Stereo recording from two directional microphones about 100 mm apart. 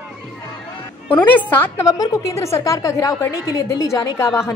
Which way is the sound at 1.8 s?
35° left (ahead or behind).